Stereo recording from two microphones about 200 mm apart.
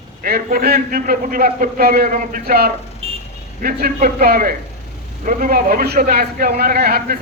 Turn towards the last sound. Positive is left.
turn(degrees=-50)  # may be behind; listen again after turning